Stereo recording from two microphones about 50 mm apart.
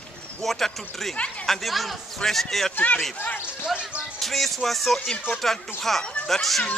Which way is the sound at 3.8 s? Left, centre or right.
Right.